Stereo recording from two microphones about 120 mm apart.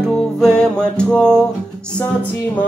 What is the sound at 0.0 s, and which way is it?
Music, 5° left (ahead or behind).